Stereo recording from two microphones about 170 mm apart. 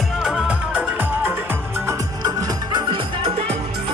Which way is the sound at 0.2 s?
5° right (ahead or behind).